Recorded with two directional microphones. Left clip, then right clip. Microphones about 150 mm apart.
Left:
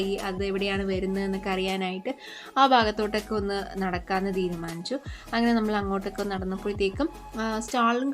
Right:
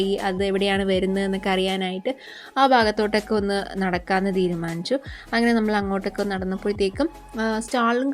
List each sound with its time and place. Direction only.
0.0 s a woman's voice: 40° right (ahead or behind); by 2.8 s 20° right (ahead or behind)
2.8 s a woman's voice: 35° right (ahead or behind)